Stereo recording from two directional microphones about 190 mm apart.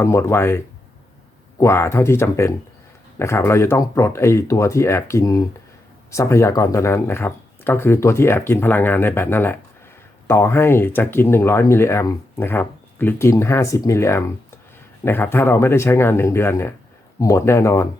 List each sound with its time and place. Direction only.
0.0 s speech: 15° left (ahead or behind)